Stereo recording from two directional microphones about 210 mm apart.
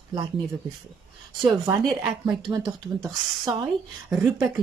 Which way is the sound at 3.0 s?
15° right (ahead or behind).